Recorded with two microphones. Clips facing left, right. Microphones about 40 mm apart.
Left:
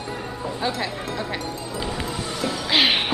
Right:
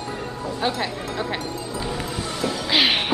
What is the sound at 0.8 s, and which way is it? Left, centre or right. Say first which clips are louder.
Music: right 1 dB; centre.